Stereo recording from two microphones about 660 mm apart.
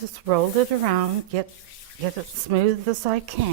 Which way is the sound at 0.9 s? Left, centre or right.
Right.